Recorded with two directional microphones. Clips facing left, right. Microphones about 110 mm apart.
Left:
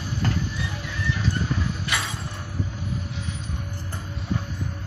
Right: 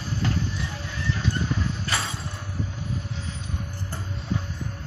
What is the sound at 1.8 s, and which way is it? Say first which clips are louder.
Mechanisms: even; 30° right (ahead or behind).